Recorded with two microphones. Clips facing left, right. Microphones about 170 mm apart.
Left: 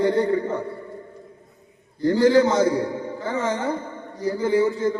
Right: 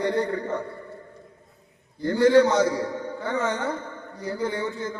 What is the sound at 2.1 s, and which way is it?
A man's voice, 25° left (ahead or behind).